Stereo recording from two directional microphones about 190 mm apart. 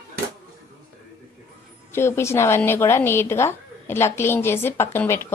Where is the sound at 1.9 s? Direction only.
15° left (ahead or behind).